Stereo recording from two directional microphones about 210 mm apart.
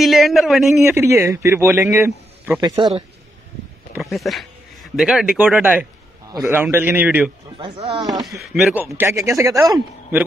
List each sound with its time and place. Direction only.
0.0 s speech: centre (ahead or behind)
0.8 s a man's voice: 10° right (ahead or behind)
3.9 s a man's voice: centre (ahead or behind)
7.5 s speech: 20° right (ahead or behind)
8.1 s speech: centre (ahead or behind)
8.8 s a man's voice: 10° right (ahead or behind)